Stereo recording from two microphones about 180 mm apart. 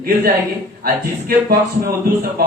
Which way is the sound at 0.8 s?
55° right (ahead or behind).